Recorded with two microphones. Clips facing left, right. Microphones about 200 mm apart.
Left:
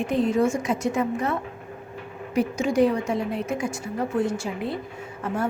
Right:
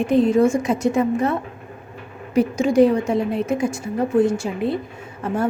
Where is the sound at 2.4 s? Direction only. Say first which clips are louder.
Right 6 dB; 30° right (ahead or behind).